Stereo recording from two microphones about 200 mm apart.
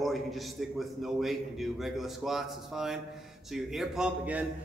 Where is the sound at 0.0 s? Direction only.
Centre (ahead or behind).